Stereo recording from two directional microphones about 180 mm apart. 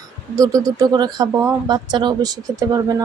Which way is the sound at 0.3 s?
20° right (ahead or behind).